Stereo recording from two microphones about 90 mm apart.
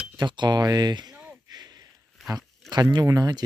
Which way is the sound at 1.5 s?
50° right (ahead or behind).